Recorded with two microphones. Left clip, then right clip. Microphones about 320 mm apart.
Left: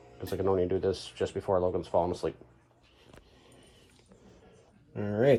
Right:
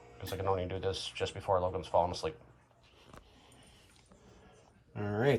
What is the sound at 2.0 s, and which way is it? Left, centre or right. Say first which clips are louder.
Speech: even; right.